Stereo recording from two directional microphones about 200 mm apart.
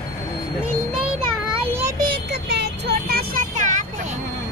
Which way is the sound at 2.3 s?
55° right (ahead or behind).